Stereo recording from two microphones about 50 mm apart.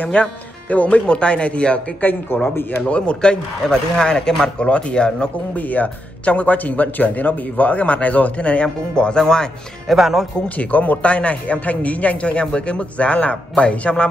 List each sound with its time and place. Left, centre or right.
0.0 s a man's voice: left
2.0 s speech: left
2.8 s a man's voice: left
5.6 s a man's voice: left; by 9.5 s centre
9.8 s speech: centre
10.6 s a man's voice: left